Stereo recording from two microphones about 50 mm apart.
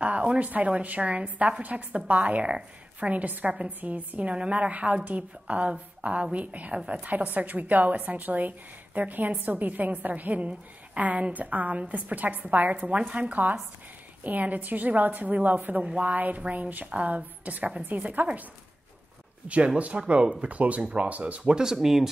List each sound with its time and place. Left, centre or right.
0.0 s a woman's voice: right
15.8 s speech: centre
16.1 s a woman's voice: right
19.4 s speech: right
21.8 s speech: centre